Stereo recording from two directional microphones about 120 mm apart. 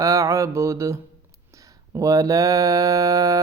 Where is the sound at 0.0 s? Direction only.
25° right (ahead or behind).